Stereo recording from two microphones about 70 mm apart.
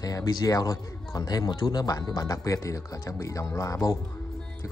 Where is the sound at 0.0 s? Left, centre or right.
Left.